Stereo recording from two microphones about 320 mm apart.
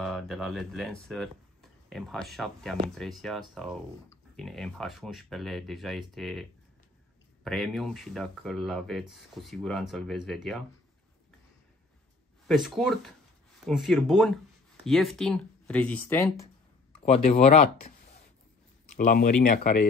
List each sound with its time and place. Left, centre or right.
0.0 s speech: centre
7.4 s speech: centre
12.4 s speech: centre
17.0 s speech: centre
18.9 s speech: left